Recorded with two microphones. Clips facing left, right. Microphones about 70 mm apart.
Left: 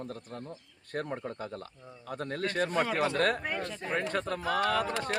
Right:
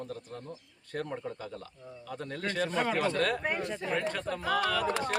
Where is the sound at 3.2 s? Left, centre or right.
Left.